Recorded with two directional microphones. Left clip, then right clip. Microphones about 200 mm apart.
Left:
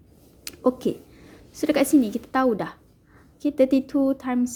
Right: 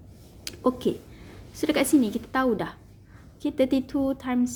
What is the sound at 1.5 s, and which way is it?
A woman's voice, 15° left (ahead or behind).